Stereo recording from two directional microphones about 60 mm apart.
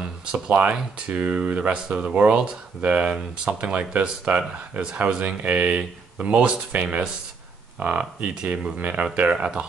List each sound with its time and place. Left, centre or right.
0.0 s speech: centre
3.2 s speech: centre
3.7 s speech: right